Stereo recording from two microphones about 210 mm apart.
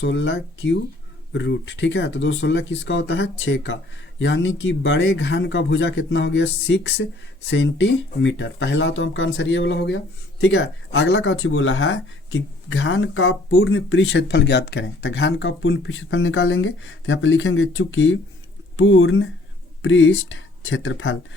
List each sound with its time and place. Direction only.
0.0 s speech: 55° left (ahead or behind)